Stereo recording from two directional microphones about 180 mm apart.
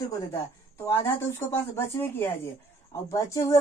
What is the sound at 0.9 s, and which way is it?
Speech, 15° left (ahead or behind).